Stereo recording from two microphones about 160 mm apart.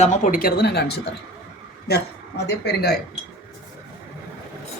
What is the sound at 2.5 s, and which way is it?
Speech, 85° left.